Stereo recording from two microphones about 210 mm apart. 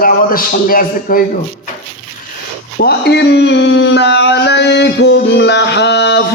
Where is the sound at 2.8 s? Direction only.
50° left (ahead or behind).